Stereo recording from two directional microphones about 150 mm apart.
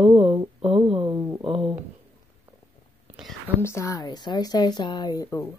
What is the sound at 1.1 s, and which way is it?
Speech, 15° right (ahead or behind).